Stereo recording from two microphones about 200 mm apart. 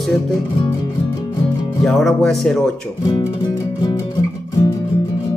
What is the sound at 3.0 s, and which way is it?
Music, 20° left (ahead or behind).